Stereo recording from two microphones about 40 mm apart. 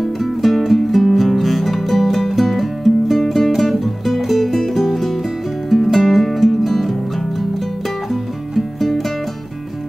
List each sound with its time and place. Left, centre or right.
0.0 s music: centre